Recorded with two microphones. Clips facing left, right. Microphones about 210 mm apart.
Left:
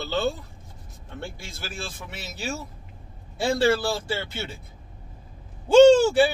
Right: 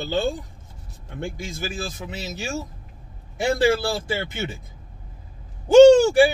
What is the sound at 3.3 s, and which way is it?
Speech, 15° right (ahead or behind).